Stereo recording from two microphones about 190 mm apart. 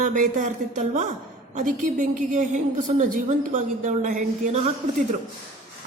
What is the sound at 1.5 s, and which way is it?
A woman's voice, 45° right (ahead or behind).